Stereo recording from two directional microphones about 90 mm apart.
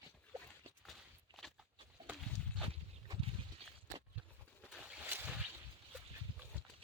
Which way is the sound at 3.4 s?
70° right (ahead or behind).